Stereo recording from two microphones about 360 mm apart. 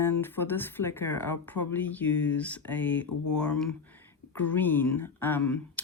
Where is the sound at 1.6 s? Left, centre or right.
Left.